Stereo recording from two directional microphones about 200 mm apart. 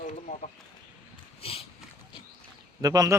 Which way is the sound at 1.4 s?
30° left (ahead or behind).